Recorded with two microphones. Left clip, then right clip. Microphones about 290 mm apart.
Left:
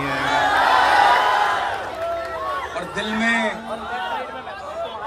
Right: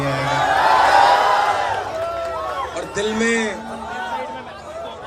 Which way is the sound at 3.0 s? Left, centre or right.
Centre.